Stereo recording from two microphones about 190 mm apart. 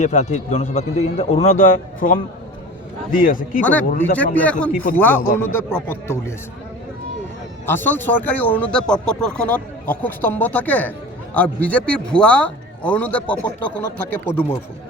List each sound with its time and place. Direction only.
0.0 s a man's voice: 40° left (ahead or behind)
3.6 s speech: 5° left (ahead or behind)
7.7 s speech: 10° left (ahead or behind)